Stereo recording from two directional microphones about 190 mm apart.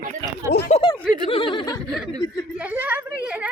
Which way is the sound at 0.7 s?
30° left (ahead or behind).